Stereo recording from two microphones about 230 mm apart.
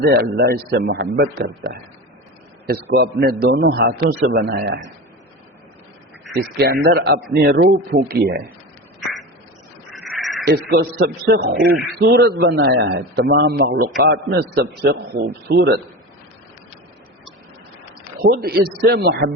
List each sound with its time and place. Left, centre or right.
0.0 s speech: right
2.6 s speech: right
6.6 s speech: right
9.9 s crow: centre
10.4 s speech: right
18.2 s speech: right